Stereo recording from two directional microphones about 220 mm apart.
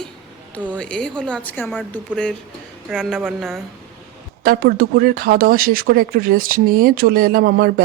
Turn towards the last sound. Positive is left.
turn(degrees=-45)  # may be behind; listen again after turning